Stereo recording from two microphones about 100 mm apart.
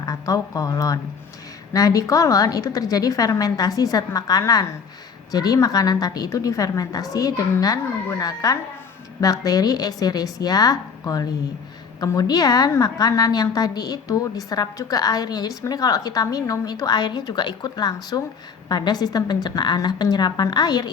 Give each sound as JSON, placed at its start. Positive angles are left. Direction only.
{"t": 0.0, "sound": "a woman's voice", "side_deg": 35}